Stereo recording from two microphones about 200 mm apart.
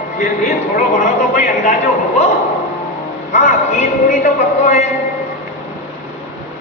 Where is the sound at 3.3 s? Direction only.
35° left (ahead or behind).